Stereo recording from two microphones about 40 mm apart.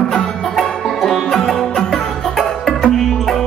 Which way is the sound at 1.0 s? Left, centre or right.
Centre.